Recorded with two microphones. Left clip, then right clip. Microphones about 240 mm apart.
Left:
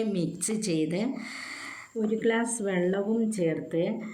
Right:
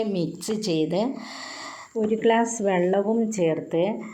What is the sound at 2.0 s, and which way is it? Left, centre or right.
Speech, right.